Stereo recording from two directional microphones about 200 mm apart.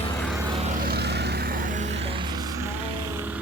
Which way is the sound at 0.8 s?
50° right (ahead or behind).